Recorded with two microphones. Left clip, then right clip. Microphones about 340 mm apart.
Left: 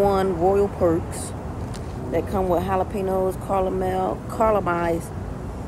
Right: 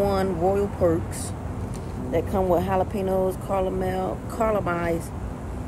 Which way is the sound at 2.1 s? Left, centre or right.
Centre.